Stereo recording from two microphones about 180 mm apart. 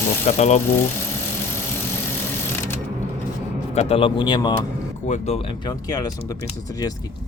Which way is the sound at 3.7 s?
35° left (ahead or behind).